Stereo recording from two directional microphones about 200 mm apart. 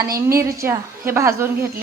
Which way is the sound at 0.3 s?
15° right (ahead or behind).